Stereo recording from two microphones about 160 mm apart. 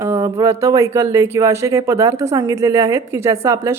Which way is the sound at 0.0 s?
15° right (ahead or behind).